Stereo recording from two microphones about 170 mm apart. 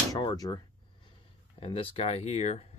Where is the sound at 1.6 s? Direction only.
35° left (ahead or behind).